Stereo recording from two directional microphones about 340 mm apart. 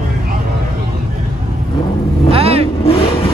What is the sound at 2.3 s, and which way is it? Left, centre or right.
Vehicle, centre.